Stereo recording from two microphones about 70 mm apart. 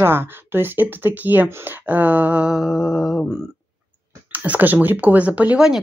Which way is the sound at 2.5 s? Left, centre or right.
Centre.